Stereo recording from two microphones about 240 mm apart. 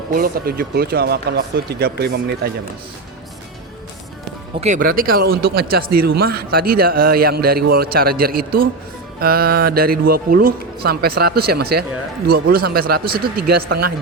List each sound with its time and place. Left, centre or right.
0.1 s speech: right
4.6 s speech: right
5.3 s speech: right
5.5 s speech: right